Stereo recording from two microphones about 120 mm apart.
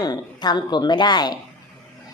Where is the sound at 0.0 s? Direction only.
35° left (ahead or behind).